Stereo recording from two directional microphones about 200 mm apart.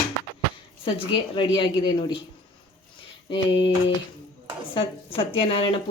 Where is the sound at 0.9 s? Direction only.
25° left (ahead or behind).